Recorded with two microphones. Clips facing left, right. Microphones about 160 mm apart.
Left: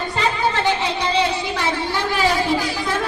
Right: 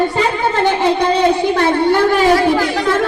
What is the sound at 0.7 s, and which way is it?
A woman's voice, 55° right (ahead or behind).